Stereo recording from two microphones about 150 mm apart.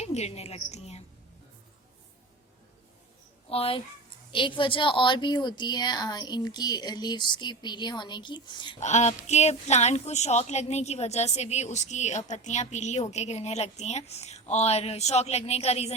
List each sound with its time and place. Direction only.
0.0 s a woman's voice: 45° left (ahead or behind)
3.5 s a woman's voice: 40° left (ahead or behind)
8.8 s a woman's voice: 50° left (ahead or behind)